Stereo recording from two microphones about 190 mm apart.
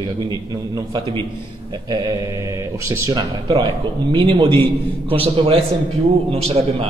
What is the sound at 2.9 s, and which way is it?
Speech, 20° right (ahead or behind).